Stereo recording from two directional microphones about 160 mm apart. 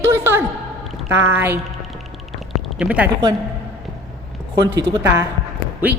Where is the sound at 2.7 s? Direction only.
5° right (ahead or behind).